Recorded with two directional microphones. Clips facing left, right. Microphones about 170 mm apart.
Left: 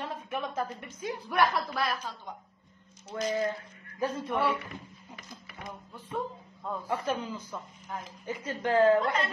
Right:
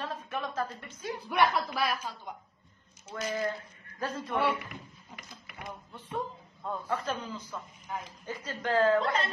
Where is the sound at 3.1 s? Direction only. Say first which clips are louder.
Left 3 dB; 20° left (ahead or behind).